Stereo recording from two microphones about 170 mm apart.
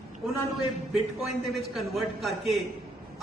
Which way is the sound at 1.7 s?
Centre (ahead or behind).